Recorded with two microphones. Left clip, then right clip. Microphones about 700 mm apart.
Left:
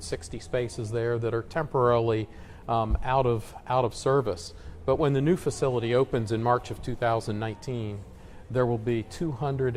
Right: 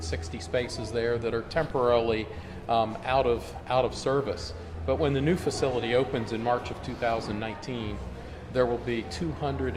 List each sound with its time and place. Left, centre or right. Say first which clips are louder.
0.1 s speech: even; left